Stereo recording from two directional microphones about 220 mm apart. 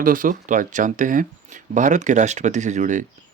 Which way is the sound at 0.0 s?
40° right (ahead or behind).